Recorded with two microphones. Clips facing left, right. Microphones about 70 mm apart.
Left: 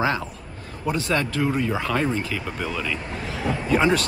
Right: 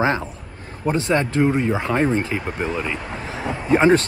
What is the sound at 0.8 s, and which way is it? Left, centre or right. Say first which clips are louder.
Speech: right 4 dB; right.